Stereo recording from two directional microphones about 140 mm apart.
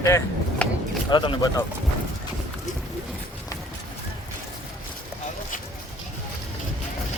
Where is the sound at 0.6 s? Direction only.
10° left (ahead or behind).